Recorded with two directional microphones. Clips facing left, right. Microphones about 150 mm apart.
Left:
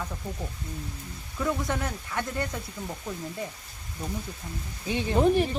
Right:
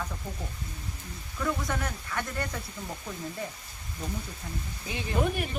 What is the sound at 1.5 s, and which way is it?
Speech, 20° left (ahead or behind).